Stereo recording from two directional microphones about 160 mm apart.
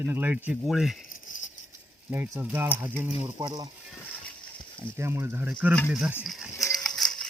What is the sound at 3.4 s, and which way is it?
Speech, 25° right (ahead or behind).